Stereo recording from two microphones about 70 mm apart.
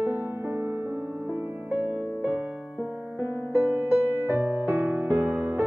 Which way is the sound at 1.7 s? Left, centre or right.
Right.